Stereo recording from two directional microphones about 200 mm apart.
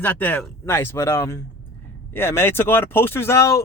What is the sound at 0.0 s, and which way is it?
Speech, 10° left (ahead or behind).